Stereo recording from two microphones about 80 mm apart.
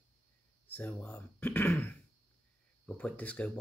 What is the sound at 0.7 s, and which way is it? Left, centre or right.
Speech, left.